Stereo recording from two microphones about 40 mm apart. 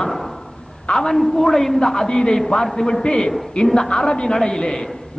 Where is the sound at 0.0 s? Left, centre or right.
Centre.